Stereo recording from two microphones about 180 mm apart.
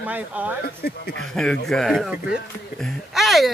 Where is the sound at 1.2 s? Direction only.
Centre (ahead or behind).